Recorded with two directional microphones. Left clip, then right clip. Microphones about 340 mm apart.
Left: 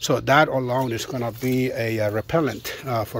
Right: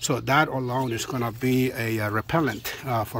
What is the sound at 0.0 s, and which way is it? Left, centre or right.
Speech, centre.